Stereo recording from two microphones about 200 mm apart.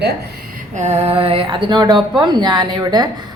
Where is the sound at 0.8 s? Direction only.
35° right (ahead or behind).